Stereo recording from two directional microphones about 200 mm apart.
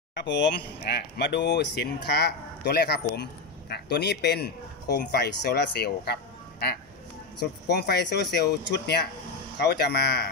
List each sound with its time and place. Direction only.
0.1 s speech: 65° left (ahead or behind)
7.3 s speech: 55° left (ahead or behind)